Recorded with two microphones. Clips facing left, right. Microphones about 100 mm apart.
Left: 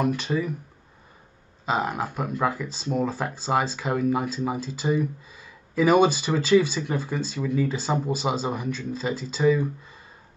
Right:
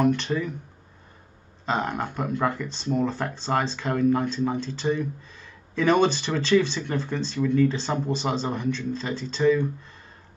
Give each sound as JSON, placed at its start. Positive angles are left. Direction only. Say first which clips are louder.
{"t": 0.0, "sound": "speech", "louder": "right 2 dB", "side_deg": 5}
{"t": 1.7, "sound": "speech", "louder": "left 1 dB", "side_deg": 5}